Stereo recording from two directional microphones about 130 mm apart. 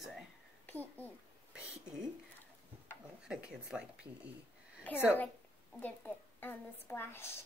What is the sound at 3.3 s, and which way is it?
Speech, 5° right (ahead or behind).